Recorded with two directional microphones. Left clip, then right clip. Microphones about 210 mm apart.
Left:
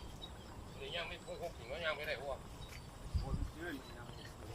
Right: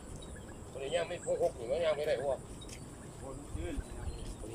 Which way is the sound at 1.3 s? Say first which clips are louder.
Right 13 dB; 35° right (ahead or behind).